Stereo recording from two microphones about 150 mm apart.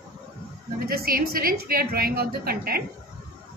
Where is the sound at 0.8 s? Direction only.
85° right.